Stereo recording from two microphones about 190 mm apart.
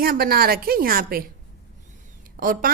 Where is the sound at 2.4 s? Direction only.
50° right (ahead or behind).